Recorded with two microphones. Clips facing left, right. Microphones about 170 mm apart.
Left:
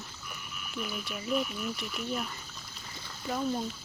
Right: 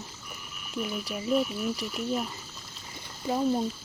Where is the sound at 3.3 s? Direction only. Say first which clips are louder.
Right 5 dB; 25° right (ahead or behind).